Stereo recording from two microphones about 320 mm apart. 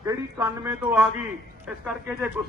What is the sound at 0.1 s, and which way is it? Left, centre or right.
Speech, centre.